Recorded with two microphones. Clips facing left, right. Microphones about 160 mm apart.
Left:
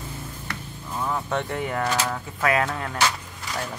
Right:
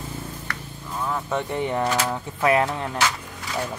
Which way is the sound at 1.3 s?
15° right (ahead or behind).